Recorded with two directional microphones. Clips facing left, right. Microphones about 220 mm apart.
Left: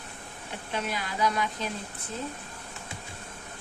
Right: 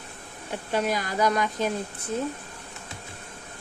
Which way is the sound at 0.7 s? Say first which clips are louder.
Right 7 dB; 40° right (ahead or behind).